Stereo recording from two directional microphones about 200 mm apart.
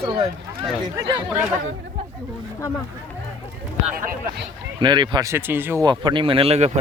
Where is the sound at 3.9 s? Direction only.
45° right (ahead or behind).